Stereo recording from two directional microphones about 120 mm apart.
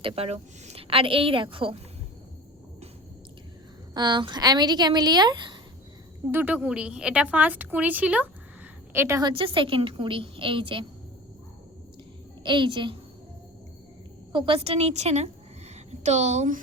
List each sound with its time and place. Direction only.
0.0 s a woman's voice: 55° right (ahead or behind)
3.9 s speech: 40° right (ahead or behind)
6.3 s a woman's voice: 15° right (ahead or behind)
9.2 s a woman's voice: 45° right (ahead or behind)
12.4 s a woman's voice: 40° right (ahead or behind)
14.3 s a woman's voice: 50° right (ahead or behind); by 16.6 s 70° right (ahead or behind)